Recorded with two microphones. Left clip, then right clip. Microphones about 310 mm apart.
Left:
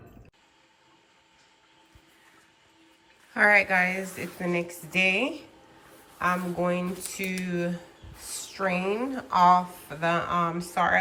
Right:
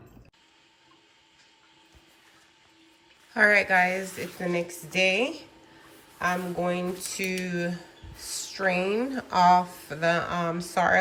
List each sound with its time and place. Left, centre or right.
3.3 s speech: centre
8.4 s a sound: centre
8.9 s speech: right
9.3 s speech: centre